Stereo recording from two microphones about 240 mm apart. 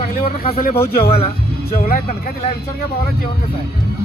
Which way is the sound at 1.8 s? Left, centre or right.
Left.